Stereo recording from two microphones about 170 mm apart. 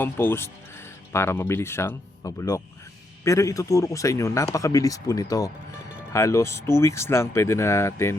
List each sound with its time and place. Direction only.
0.0 s a man's voice: 10° left (ahead or behind)